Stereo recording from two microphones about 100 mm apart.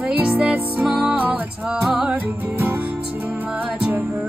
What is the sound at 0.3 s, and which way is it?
Music, 10° right (ahead or behind).